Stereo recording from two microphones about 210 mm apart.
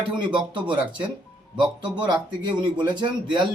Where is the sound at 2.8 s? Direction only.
20° right (ahead or behind).